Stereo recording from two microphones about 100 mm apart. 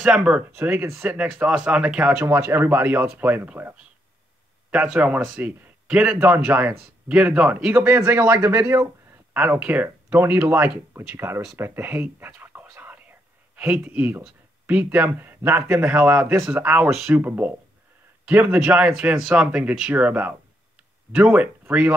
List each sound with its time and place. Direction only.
0.0 s speech: 10° right (ahead or behind)
0.6 s speech: 25° right (ahead or behind)
1.1 s speech: 10° right (ahead or behind)
2.2 s a man's voice: 20° right (ahead or behind)
12.7 s whispering: 15° right (ahead or behind)
13.6 s speech: 15° right (ahead or behind)